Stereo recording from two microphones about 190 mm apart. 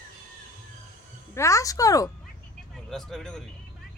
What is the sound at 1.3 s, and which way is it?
Speech, 15° left (ahead or behind).